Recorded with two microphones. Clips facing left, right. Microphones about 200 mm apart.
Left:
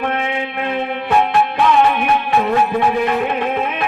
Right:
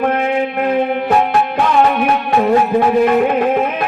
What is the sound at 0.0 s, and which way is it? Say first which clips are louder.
Music: right 5 dB; 40° right (ahead or behind).